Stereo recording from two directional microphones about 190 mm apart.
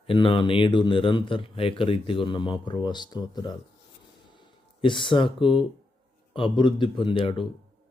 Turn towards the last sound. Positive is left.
turn(degrees=30)  # may be behind; listen again after turning